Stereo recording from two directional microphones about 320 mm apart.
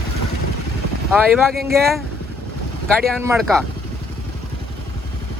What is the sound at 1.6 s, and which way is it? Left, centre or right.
Speech, right.